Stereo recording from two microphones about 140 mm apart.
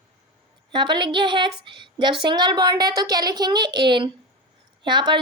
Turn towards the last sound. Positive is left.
turn(degrees=-35)  # may be behind; listen again after turning